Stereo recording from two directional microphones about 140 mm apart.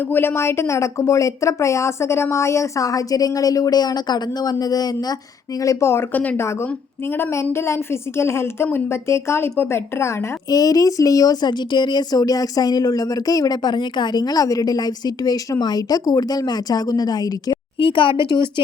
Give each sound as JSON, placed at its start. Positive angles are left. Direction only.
{"t": 0.1, "sound": "a woman's voice", "side_deg": 15}